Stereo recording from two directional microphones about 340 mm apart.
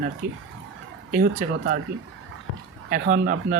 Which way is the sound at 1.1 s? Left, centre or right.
Right.